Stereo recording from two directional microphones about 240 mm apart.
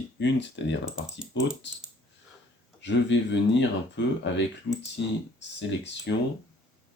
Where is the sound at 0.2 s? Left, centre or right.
Left.